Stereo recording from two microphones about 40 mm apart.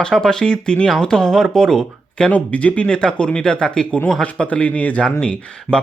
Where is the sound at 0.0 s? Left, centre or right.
Centre.